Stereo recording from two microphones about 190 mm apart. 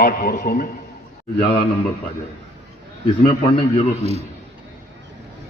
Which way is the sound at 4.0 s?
35° right (ahead or behind).